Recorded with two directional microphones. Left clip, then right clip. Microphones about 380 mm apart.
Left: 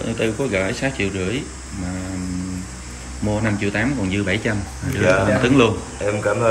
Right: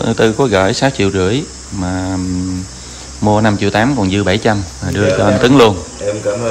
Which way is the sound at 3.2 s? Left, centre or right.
Right.